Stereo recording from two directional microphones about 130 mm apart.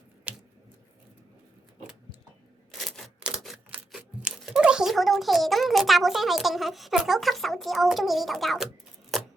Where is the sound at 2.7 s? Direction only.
Centre (ahead or behind).